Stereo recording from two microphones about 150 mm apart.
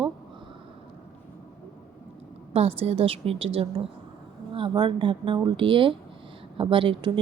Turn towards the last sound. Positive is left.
turn(degrees=-35)  # may be behind; listen again after turning